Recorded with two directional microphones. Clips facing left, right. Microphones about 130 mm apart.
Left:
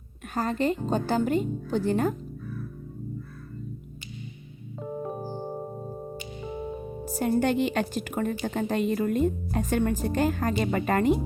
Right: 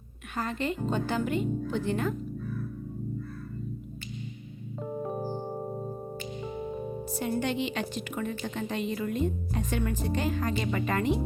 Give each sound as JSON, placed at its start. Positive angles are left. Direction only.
{"t": 0.3, "sound": "a woman's voice", "side_deg": 40}
{"t": 4.8, "sound": "keyboard", "side_deg": 0}
{"t": 7.0, "sound": "a woman's voice", "side_deg": 45}